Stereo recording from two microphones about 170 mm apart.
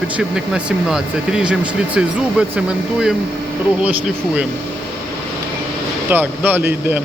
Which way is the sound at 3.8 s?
10° right (ahead or behind).